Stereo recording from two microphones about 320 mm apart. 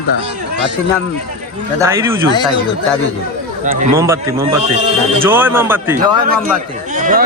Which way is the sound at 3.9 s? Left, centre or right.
Centre.